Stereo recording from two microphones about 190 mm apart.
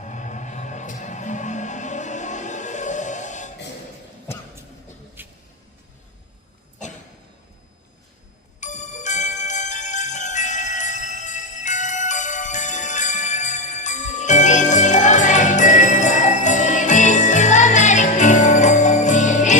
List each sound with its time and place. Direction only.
0.0 s music: 40° left (ahead or behind)
5.2 s vehicle: 10° right (ahead or behind)
8.6 s jingle bell: 40° left (ahead or behind)